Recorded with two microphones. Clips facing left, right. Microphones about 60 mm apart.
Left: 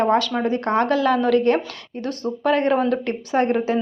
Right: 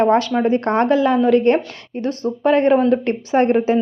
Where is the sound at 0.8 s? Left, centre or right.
Right.